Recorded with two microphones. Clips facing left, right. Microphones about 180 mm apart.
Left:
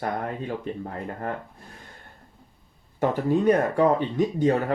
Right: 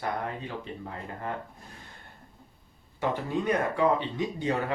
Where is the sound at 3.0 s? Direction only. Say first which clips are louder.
Left 7 dB; 45° left (ahead or behind).